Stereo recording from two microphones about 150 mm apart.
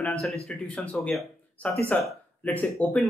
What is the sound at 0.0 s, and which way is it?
A man's voice, 5° left (ahead or behind).